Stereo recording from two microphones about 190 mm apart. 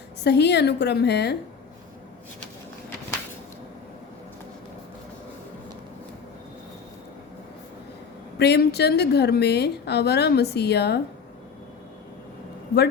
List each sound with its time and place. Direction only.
0.2 s a woman's voice: 65° left (ahead or behind)
8.4 s a woman's voice: 60° left (ahead or behind)